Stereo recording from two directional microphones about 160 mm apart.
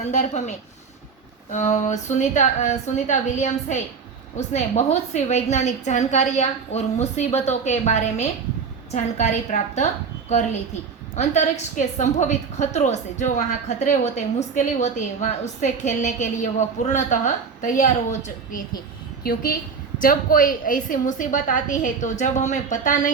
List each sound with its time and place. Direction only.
0.0 s a woman's voice: 45° left (ahead or behind)
11.1 s a woman's voice: 45° left (ahead or behind)
19.2 s a woman's voice: 65° left (ahead or behind)